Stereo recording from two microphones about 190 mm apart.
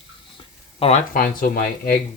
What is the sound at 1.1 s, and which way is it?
Speech, 50° left (ahead or behind).